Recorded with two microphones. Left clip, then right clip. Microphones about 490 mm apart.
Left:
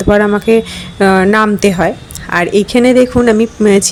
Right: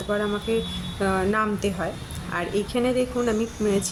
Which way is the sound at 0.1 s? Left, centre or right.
Right.